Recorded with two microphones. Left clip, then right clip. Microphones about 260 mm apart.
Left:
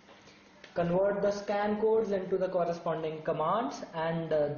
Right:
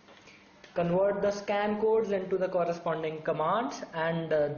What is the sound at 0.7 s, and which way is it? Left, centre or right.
A man's voice, centre.